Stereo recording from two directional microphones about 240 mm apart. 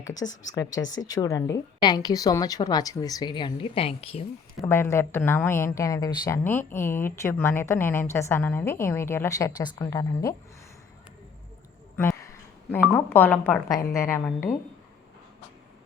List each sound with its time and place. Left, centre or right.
0.0 s a woman's voice: centre
4.6 s a woman's voice: centre
13.1 s a woman's voice: centre